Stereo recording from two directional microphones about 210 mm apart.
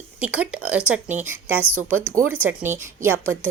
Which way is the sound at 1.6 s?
85° right.